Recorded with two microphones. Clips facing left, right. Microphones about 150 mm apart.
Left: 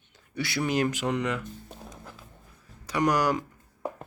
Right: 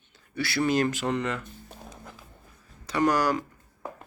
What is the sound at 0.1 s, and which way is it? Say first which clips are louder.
Speech: right 1 dB; 15° left (ahead or behind).